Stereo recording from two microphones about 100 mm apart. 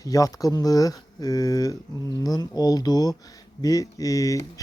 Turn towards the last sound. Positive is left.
turn(degrees=35)  # may be behind; listen again after turning